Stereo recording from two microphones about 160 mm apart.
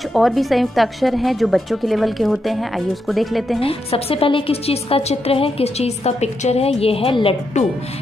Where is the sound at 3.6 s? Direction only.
35° left (ahead or behind).